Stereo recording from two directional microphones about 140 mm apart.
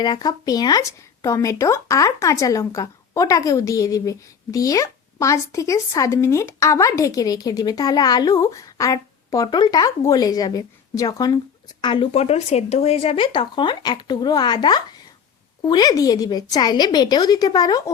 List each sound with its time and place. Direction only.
0.0 s speech: 30° left (ahead or behind)
12.1 s speech: 50° left (ahead or behind); by 17.9 s 30° left (ahead or behind)